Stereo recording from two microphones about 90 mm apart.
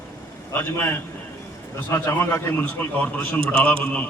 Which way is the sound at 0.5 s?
20° left (ahead or behind).